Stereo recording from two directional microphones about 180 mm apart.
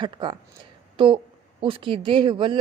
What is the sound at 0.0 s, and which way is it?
A woman's voice, 25° right (ahead or behind).